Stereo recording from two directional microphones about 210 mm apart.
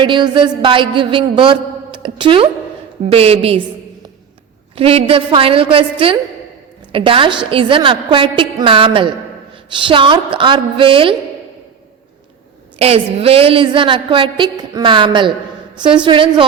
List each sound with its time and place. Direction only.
0.0 s a woman's voice: 20° right (ahead or behind)
4.7 s a woman's voice: 25° right (ahead or behind)
12.8 s a woman's voice: 30° right (ahead or behind)